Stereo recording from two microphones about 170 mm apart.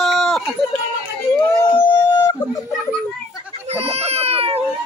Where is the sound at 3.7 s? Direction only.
35° right (ahead or behind).